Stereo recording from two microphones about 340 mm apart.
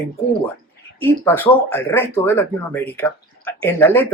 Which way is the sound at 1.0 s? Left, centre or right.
Centre.